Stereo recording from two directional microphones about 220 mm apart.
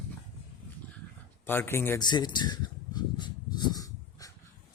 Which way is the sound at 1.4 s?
10° left (ahead or behind).